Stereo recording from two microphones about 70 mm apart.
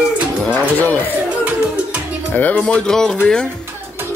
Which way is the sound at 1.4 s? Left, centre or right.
Centre.